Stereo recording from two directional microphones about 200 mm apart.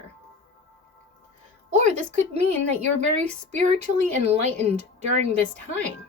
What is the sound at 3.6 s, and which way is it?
Speech, 35° right (ahead or behind).